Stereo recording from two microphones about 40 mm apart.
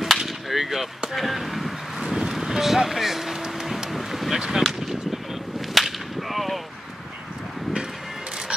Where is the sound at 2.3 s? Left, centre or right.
Centre.